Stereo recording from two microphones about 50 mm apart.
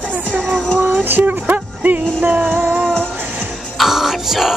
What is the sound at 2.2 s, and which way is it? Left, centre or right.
Music, right.